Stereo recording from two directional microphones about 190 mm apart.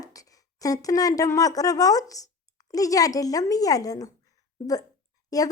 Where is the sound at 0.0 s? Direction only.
20° left (ahead or behind).